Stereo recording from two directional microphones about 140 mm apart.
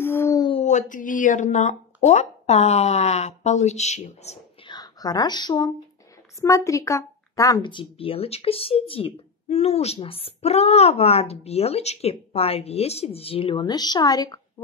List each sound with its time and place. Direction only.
0.0 s a sound: 15° left (ahead or behind)
0.7 s speech: 65° left (ahead or behind)
4.6 s speech: 30° left (ahead or behind)
7.6 s speech: 40° left (ahead or behind)